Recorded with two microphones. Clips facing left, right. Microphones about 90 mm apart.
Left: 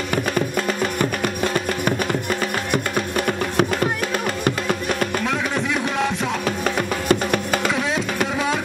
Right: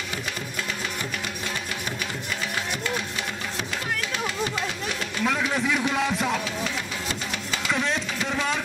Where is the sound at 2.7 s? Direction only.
55° left (ahead or behind).